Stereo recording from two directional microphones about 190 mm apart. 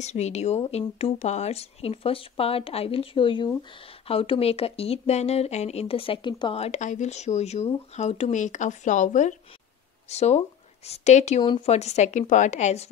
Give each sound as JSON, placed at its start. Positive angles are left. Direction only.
{"t": 0.0, "sound": "speech", "side_deg": 35}